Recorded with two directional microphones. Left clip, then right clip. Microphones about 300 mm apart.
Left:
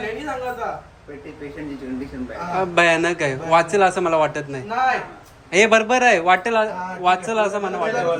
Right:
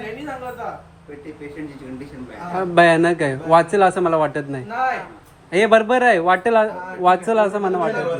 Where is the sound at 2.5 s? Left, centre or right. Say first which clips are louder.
Right 3 dB; centre.